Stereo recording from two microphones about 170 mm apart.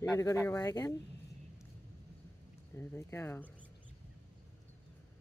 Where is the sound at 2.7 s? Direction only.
10° left (ahead or behind).